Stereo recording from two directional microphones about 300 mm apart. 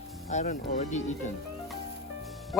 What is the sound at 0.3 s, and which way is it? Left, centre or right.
Speech, left.